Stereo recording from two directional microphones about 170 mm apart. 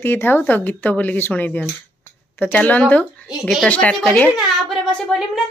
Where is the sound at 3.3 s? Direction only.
Centre (ahead or behind).